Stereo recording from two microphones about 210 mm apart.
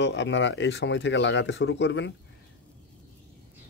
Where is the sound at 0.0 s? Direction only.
60° left (ahead or behind).